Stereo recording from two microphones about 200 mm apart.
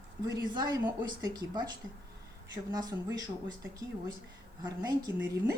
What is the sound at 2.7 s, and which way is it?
Speech, 20° right (ahead or behind).